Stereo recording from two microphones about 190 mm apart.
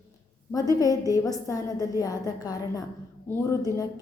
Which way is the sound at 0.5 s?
20° left (ahead or behind).